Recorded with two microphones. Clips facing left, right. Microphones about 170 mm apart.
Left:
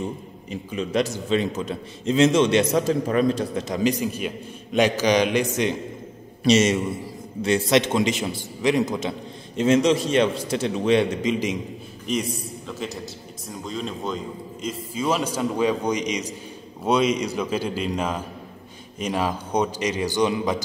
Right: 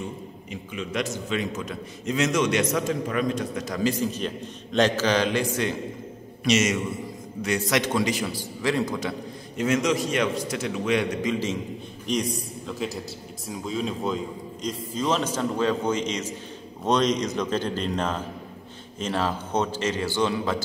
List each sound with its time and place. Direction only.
0.0 s a man's voice: 35° left (ahead or behind); by 5.8 s 20° left (ahead or behind)
6.4 s a man's voice: 30° left (ahead or behind)
12.1 s a man's voice: centre (ahead or behind)